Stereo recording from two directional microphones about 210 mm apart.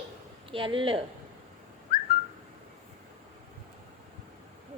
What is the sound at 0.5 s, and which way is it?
Speech, 25° right (ahead or behind).